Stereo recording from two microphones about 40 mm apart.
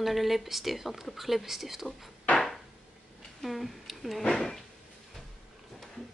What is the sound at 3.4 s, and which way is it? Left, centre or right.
Speech, centre.